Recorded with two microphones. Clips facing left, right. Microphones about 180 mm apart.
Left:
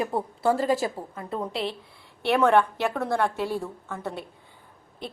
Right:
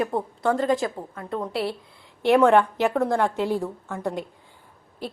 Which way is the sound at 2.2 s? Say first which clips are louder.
Right 4 dB; 15° right (ahead or behind).